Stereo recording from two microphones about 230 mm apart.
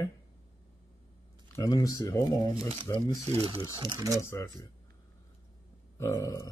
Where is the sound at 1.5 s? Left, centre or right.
Centre.